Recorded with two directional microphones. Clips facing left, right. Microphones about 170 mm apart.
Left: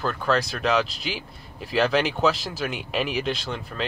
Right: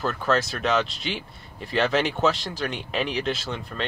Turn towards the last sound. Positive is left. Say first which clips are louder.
# left 1 dB
turn(degrees=0)  # may be behind; listen again after turning